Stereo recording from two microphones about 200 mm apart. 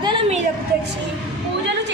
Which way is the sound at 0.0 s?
25° right (ahead or behind).